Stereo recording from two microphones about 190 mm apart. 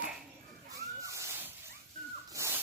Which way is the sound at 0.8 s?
15° right (ahead or behind).